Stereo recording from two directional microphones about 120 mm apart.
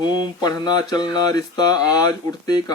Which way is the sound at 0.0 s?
35° left (ahead or behind).